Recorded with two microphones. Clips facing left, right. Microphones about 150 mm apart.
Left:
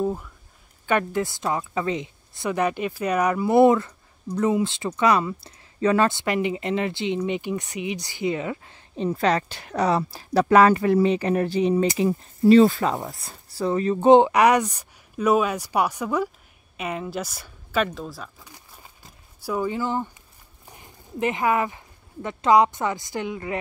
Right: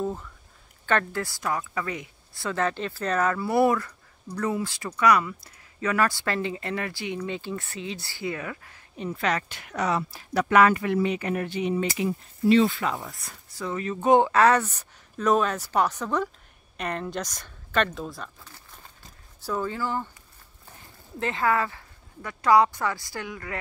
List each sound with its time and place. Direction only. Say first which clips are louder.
0.0 s speech: left 4 dB; 10° left (ahead or behind); by 13.1 s 40° left (ahead or behind)
13.1 s speech: left 3 dB; 30° left (ahead or behind); by 18.3 s centre (ahead or behind)
18.4 s a sound: left 1 dB; 10° left (ahead or behind)
19.4 s speech: left 3 dB; 10° left (ahead or behind)